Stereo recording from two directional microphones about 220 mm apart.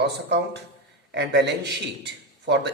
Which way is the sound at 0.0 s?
50° right (ahead or behind).